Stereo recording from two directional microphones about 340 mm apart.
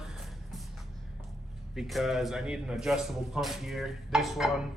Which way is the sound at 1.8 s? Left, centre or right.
Centre.